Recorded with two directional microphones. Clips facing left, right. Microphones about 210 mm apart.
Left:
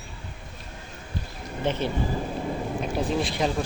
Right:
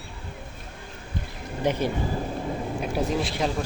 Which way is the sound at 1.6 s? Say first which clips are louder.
Right 1 dB; 10° right (ahead or behind).